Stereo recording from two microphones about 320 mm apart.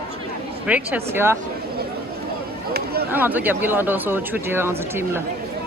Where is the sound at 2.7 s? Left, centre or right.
Right.